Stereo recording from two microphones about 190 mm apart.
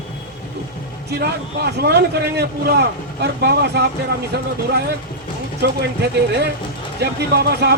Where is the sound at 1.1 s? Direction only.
60° right (ahead or behind).